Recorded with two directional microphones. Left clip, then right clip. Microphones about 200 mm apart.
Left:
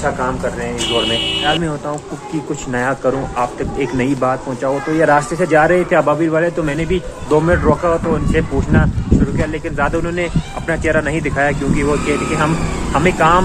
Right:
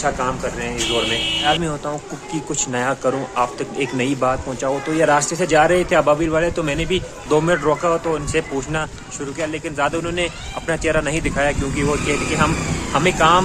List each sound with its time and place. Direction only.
0.9 s speech: 20° right (ahead or behind)
2.7 s speech: 20° right (ahead or behind)
12.9 s speech: 20° right (ahead or behind)